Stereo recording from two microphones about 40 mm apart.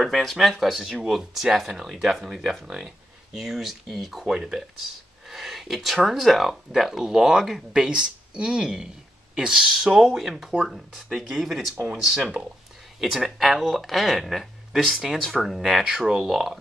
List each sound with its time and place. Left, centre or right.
0.0 s speech: centre
0.8 s speech: centre
11.7 s speech: right
13.0 s speech: centre
15.8 s speech: centre